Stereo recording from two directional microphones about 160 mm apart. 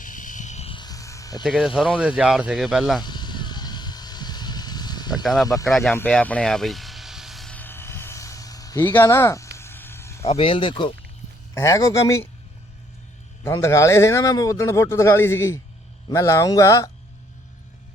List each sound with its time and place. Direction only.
0.0 s music: 55° left (ahead or behind)
0.8 s music: 20° left (ahead or behind)
1.5 s speech: 5° right (ahead or behind)
3.0 s vehicle: 25° left (ahead or behind)
5.2 s speech: centre (ahead or behind)
6.0 s vehicle: 10° left (ahead or behind)
10.2 s speech: 35° left (ahead or behind)
11.5 s a man's voice: 20° left (ahead or behind)
13.4 s a man's voice: 15° left (ahead or behind)